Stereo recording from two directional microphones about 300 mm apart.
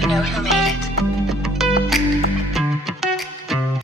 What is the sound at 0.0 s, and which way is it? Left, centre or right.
Speech, centre.